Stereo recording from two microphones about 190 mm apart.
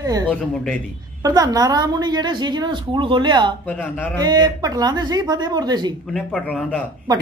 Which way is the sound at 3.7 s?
10° left (ahead or behind).